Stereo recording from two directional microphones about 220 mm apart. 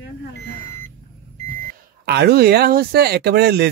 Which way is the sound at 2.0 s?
50° right (ahead or behind).